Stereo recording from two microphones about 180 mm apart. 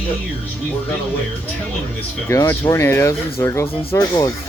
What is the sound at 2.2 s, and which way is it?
Speech, 15° left (ahead or behind).